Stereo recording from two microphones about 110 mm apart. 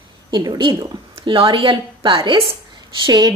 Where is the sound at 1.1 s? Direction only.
50° right (ahead or behind).